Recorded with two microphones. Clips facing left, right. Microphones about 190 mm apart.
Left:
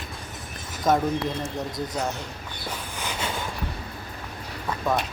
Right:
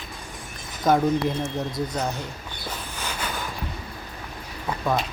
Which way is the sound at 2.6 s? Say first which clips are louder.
Even; 10° left (ahead or behind).